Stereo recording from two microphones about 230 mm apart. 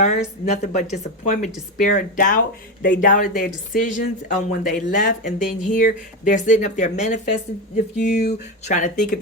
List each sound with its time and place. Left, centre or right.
0.0 s speech: left
7.9 s speech: left
8.6 s speech: left